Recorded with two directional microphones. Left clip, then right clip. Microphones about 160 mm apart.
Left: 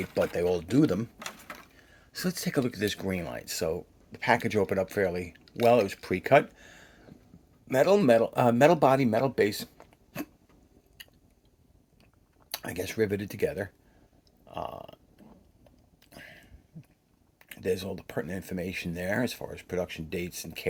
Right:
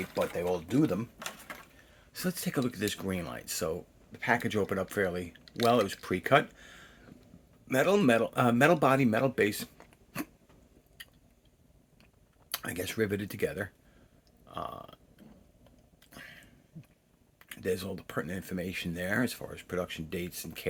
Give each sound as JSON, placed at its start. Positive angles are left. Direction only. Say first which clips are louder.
{"t": 0.2, "sound": "speech", "louder": "left 4 dB", "side_deg": 45}
{"t": 2.1, "sound": "speech", "louder": "left 3 dB", "side_deg": 35}
{"t": 4.1, "sound": "speech", "louder": "left 4 dB", "side_deg": 30}
{"t": 12.5, "sound": "speech", "louder": "left 1 dB", "side_deg": 15}
{"t": 14.4, "sound": "burping", "louder": "left 2 dB", "side_deg": 15}
{"t": 16.1, "sound": "a sound", "louder": "left 1 dB", "side_deg": 10}
{"t": 17.5, "sound": "speech", "louder": "left 3 dB", "side_deg": 15}